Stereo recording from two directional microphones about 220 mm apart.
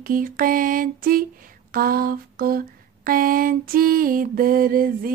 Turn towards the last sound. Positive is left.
turn(degrees=-40)  # may be behind; listen again after turning